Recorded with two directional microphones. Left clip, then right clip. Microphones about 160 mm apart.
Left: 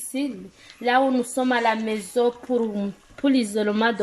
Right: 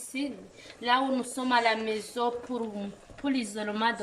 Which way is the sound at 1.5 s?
45° left (ahead or behind).